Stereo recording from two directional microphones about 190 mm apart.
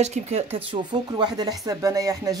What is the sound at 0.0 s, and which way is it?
Speech, 35° right (ahead or behind).